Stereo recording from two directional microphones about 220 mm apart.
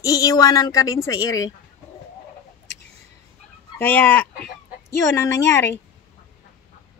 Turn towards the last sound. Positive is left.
turn(degrees=10)  # may be behind; listen again after turning